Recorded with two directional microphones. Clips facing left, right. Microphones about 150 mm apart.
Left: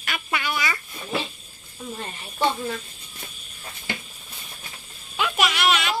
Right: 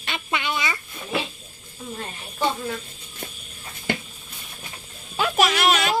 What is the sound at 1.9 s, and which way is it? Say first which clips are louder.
Speech: right 2 dB; centre (ahead or behind).